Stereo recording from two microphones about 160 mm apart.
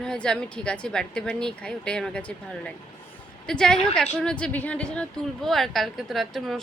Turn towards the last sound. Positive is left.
turn(degrees=0)  # may be behind; listen again after turning